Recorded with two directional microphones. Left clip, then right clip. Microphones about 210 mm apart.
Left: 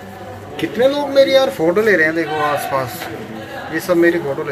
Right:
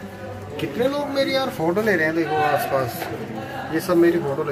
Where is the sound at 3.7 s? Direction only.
5° right (ahead or behind).